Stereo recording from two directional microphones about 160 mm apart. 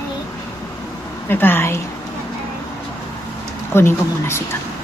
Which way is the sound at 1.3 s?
15° left (ahead or behind).